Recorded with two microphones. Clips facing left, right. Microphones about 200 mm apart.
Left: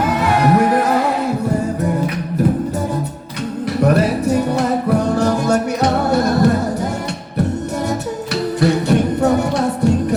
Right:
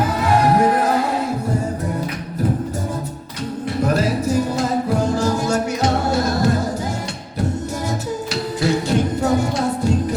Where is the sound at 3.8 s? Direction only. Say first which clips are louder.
Left 4 dB; 65° left (ahead or behind).